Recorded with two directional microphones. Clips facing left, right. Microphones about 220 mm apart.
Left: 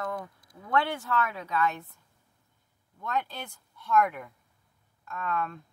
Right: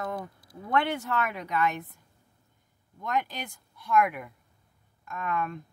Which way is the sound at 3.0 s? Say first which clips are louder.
Right 2 dB; 15° right (ahead or behind).